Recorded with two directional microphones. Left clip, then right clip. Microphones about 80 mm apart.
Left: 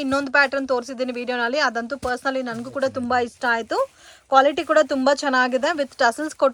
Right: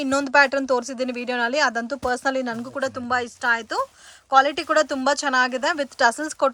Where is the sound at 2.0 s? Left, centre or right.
Right.